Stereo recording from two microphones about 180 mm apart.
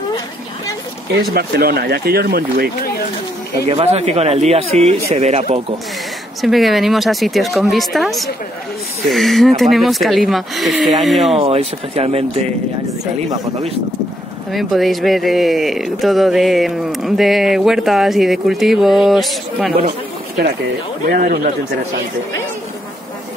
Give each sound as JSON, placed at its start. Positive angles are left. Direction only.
{"t": 1.3, "sound": "speech", "side_deg": -60}
{"t": 3.6, "sound": "speech", "side_deg": -35}
{"t": 6.4, "sound": "speech", "side_deg": 0}
{"t": 11.3, "sound": "speech", "side_deg": -35}
{"t": 14.5, "sound": "speech", "side_deg": 0}
{"t": 20.4, "sound": "speech", "side_deg": -60}